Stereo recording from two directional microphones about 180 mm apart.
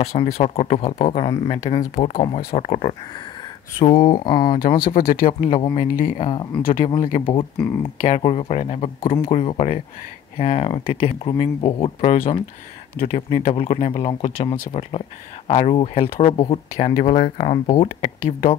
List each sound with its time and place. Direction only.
0.0 s speech: 35° left (ahead or behind)
3.8 s speech: 25° left (ahead or behind)
4.6 s speech: 55° left (ahead or behind)
5.5 s speech: 25° left (ahead or behind)
5.8 s speech: 50° left (ahead or behind)
6.1 s speech: 25° left (ahead or behind)
6.6 s speech: 50° left (ahead or behind)
7.8 s speech: 30° left (ahead or behind)